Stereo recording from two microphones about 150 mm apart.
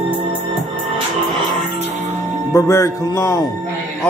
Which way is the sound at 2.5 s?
20° left (ahead or behind).